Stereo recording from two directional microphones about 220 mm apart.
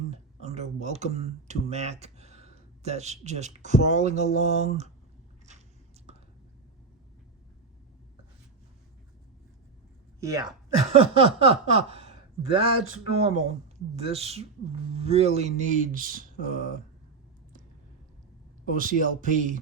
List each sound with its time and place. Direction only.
0.1 s speech: 30° right (ahead or behind)
5.5 s biting: 30° right (ahead or behind)
10.2 s speech: 15° right (ahead or behind)
10.9 s speech: 25° right (ahead or behind)
18.7 s speech: 40° right (ahead or behind)